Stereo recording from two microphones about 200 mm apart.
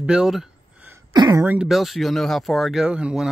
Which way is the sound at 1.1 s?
20° right (ahead or behind).